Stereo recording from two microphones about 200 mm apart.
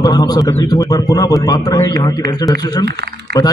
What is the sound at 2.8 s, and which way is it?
Speech, 55° right (ahead or behind).